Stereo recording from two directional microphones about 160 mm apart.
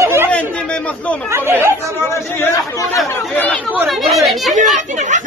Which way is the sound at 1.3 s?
15° right (ahead or behind).